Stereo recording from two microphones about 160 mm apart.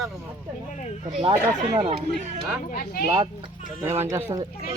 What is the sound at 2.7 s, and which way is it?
Speech, 60° left (ahead or behind).